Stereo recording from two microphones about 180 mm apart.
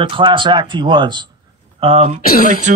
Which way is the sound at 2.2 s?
55° left (ahead or behind).